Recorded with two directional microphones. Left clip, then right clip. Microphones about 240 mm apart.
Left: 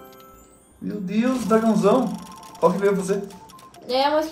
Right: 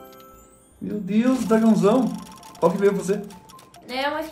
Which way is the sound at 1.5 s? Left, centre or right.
Right.